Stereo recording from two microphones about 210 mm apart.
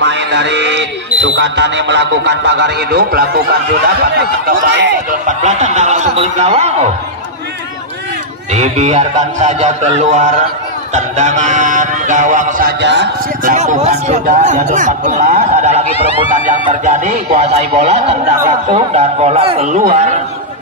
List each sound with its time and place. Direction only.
0.0 s speech: 55° right (ahead or behind)
5.1 s a man's voice: 35° right (ahead or behind)
8.5 s a man's voice: 30° right (ahead or behind)
12.8 s speech: 55° right (ahead or behind)
13.4 s a man's voice: 40° right (ahead or behind)
16.8 s a man's voice: 35° right (ahead or behind)